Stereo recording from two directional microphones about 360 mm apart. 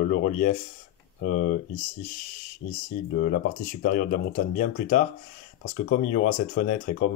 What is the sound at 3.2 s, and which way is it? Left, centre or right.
Speech, left.